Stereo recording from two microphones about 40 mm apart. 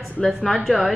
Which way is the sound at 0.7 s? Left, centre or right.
Centre.